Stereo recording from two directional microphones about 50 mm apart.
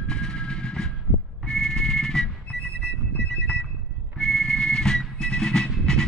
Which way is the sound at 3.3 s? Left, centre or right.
Left.